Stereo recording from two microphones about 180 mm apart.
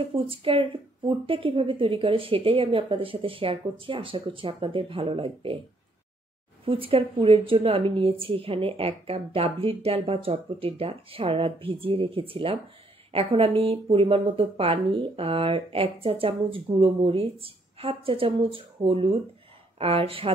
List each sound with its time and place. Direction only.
0.3 s a woman's voice: 30° right (ahead or behind)
6.6 s speech: 30° right (ahead or behind)